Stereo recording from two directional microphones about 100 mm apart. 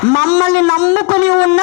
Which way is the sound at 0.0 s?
20° left (ahead or behind).